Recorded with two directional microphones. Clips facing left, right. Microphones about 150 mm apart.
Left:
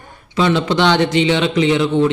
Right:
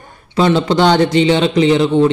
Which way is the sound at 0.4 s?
35° right (ahead or behind).